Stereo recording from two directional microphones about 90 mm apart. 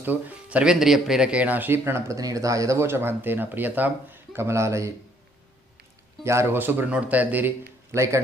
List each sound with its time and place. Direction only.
0.0 s speech: 20° right (ahead or behind); by 4.9 s 35° right (ahead or behind)
6.2 s speech: 30° right (ahead or behind)
7.9 s speech: 35° right (ahead or behind)